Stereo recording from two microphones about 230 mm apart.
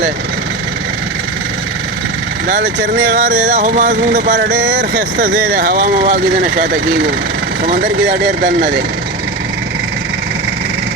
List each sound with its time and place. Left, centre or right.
2.5 s vehicle: right
7.6 s vehicle: right